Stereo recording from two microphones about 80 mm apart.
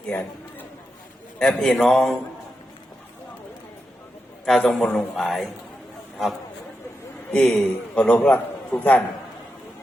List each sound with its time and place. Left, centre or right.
0.1 s a man's voice: left
1.4 s speech: centre
4.4 s speech: centre
7.4 s a man's voice: centre